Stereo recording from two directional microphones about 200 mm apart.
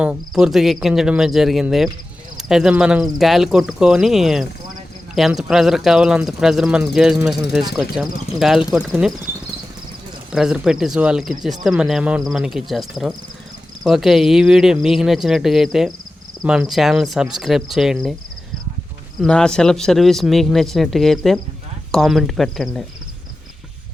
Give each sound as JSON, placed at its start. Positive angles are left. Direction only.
{"t": 0.0, "sound": "speech", "side_deg": -5}
{"t": 10.3, "sound": "speech", "side_deg": -5}
{"t": 19.2, "sound": "speech", "side_deg": 5}